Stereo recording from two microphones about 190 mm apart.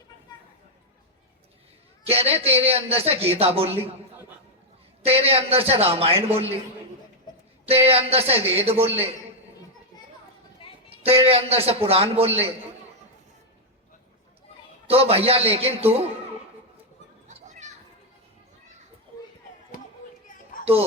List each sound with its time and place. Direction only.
2.0 s a man's voice: 30° right (ahead or behind)
5.0 s a man's voice: 30° right (ahead or behind)
7.6 s a man's voice: 30° right (ahead or behind)
11.0 s a man's voice: 30° right (ahead or behind)
14.8 s a man's voice: 30° right (ahead or behind)
17.2 s children playing: 40° right (ahead or behind)